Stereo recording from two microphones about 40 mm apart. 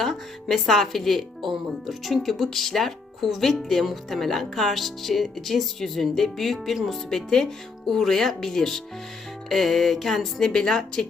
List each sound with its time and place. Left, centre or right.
0.0 s speech: centre
10.5 s speech: centre